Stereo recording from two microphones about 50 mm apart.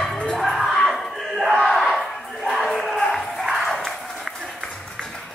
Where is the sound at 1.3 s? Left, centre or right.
Centre.